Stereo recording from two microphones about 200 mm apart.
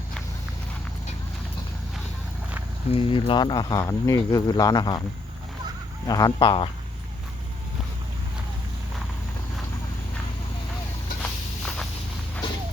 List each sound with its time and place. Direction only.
2.9 s speech: 25° left (ahead or behind)
6.1 s speech: 20° left (ahead or behind)
11.2 s walk: 5° left (ahead or behind)